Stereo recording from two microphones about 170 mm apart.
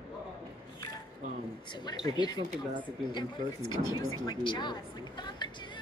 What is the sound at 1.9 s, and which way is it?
Speech, 25° left (ahead or behind).